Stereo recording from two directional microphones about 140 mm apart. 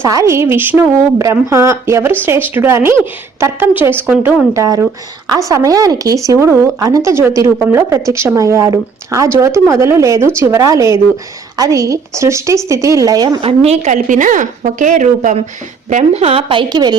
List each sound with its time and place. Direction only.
0.0 s speech: 25° right (ahead or behind)
4.5 s speech: 20° right (ahead or behind)
13.4 s a woman's voice: 50° right (ahead or behind); by 17.0 s 30° right (ahead or behind)